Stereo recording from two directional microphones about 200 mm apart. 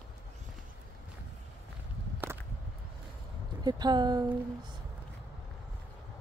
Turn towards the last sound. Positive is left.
turn(degrees=-20)  # may be behind; listen again after turning